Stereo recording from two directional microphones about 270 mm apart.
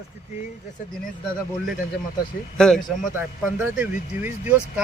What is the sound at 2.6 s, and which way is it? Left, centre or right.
Speech, centre.